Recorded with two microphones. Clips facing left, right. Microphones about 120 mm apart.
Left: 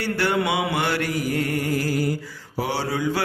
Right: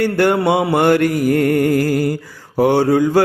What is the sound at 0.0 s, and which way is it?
Mantra, 50° right (ahead or behind).